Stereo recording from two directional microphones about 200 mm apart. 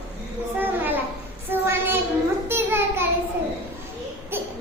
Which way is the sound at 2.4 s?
10° right (ahead or behind).